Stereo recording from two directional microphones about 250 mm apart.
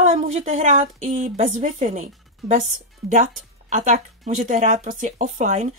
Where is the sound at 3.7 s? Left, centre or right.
Right.